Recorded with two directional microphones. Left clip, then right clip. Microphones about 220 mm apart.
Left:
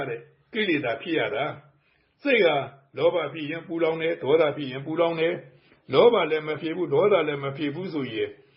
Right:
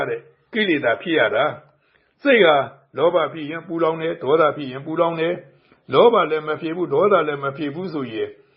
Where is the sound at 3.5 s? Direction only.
15° right (ahead or behind).